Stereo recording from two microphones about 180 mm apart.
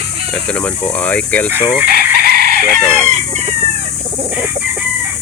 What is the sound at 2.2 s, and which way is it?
Chicken, 60° right (ahead or behind).